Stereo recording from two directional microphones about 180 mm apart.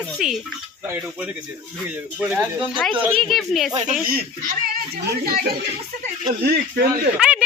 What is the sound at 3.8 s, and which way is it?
Speech, 50° right (ahead or behind).